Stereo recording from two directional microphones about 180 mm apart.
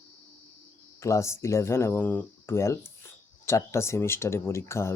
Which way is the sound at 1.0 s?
15° left (ahead or behind).